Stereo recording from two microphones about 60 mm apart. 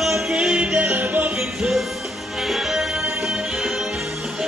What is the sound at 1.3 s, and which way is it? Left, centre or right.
Music, centre.